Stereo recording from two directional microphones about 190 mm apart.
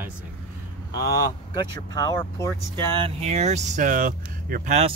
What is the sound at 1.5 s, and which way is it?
Speech, 20° left (ahead or behind).